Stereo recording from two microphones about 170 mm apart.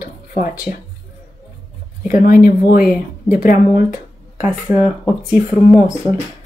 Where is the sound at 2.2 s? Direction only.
55° left (ahead or behind).